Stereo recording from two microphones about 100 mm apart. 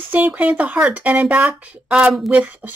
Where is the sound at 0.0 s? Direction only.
15° right (ahead or behind).